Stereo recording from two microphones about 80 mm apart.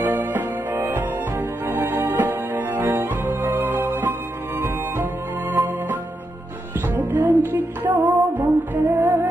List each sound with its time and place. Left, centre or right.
0.0 s music: right
7.0 s music: right